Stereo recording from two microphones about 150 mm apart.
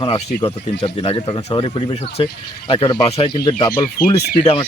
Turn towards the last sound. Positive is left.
turn(degrees=35)  # may be behind; listen again after turning